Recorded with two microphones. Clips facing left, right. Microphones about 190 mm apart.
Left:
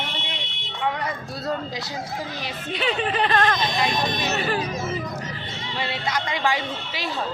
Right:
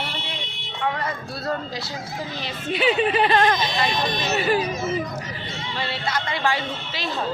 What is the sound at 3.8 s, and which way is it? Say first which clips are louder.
Speech: even; 15° left (ahead or behind).